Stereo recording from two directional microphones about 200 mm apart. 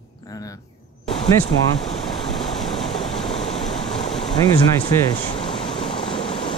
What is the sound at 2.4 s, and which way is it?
Vehicle, centre (ahead or behind).